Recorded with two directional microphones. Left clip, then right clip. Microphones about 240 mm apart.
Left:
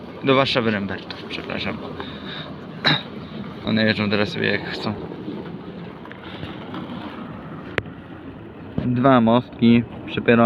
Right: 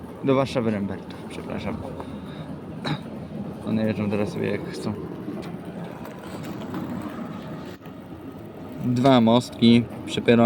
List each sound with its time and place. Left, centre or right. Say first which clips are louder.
0.3 s speech: left 5 dB; centre
3.7 s speech: left 6 dB; centre
9.0 s speech: left 2 dB; centre